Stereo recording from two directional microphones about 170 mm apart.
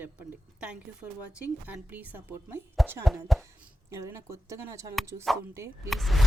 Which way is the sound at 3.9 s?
15° right (ahead or behind).